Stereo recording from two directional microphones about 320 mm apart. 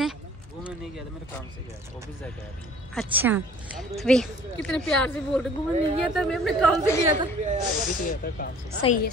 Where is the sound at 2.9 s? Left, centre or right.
Centre.